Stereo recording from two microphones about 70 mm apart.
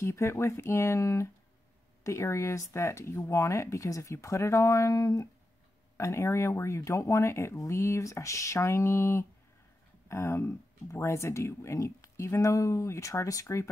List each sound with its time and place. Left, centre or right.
0.0 s speech: left